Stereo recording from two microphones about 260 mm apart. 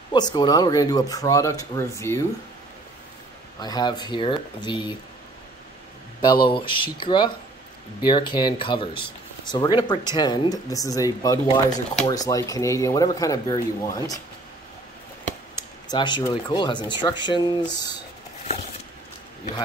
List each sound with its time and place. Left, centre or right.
0.1 s speech: centre
3.5 s speech: centre
6.2 s speech: centre
11.4 s speech: left
12.1 s speech: centre
15.5 s speech: centre